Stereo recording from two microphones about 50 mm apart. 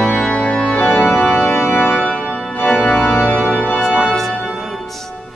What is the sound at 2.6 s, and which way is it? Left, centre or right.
Organ, left.